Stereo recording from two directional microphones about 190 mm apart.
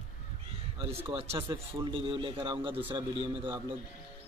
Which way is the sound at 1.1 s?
30° right (ahead or behind).